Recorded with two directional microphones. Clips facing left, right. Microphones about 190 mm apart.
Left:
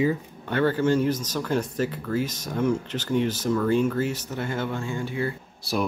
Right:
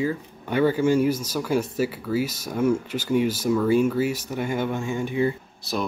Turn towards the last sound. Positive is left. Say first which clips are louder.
# left 1 dB
turn(degrees=10)  # may be behind; listen again after turning